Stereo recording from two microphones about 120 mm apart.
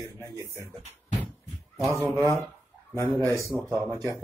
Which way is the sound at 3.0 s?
20° right (ahead or behind).